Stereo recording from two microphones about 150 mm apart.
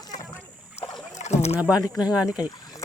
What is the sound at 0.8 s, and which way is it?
Rowboat, 45° left (ahead or behind).